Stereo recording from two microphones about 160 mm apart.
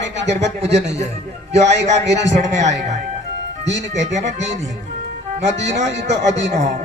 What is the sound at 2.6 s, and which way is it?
Speech, 45° right (ahead or behind).